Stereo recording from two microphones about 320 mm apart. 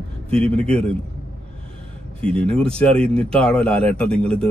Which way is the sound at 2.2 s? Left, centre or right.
Centre.